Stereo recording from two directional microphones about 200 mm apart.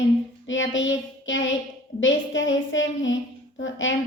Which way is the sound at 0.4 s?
70° left (ahead or behind).